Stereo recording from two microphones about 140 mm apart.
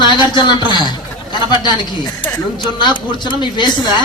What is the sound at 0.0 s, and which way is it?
A man's voice, 35° left (ahead or behind).